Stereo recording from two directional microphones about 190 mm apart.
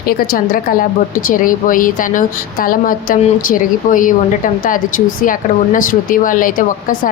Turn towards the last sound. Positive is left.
turn(degrees=45)  # may be behind; listen again after turning